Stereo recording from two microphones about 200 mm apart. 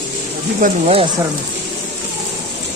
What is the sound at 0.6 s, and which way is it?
Speech, 30° right (ahead or behind).